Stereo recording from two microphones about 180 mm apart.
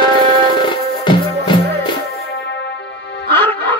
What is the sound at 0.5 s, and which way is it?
Music, 25° left (ahead or behind).